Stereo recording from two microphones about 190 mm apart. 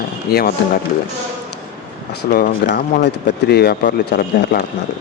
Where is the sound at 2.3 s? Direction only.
50° left (ahead or behind).